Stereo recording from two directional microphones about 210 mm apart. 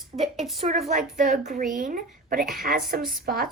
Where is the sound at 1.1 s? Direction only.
40° right (ahead or behind).